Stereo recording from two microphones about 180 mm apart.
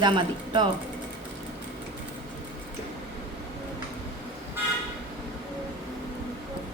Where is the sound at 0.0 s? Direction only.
25° right (ahead or behind).